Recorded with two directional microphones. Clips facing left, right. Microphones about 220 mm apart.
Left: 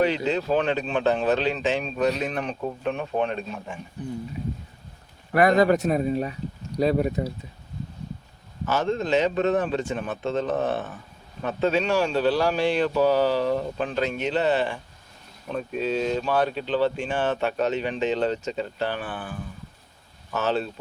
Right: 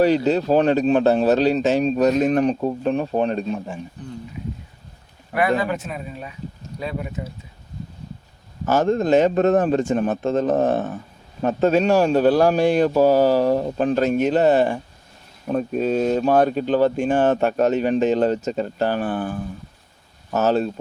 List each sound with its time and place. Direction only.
0.0 s speech: 40° right (ahead or behind)
5.3 s speech: 40° left (ahead or behind)
8.6 s speech: 45° right (ahead or behind)